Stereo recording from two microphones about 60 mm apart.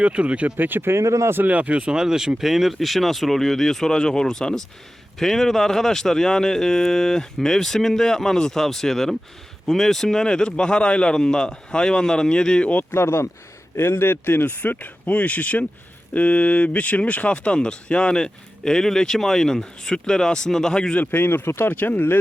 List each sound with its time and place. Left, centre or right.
0.0 s speech: centre; by 1.3 s right
1.5 s speech: right; by 12.8 s centre
12.9 s speech: left; by 20.9 s centre
20.9 s speech: left
21.7 s speech: left